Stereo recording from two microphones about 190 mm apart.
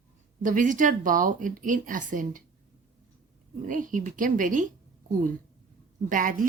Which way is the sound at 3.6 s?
45° right (ahead or behind).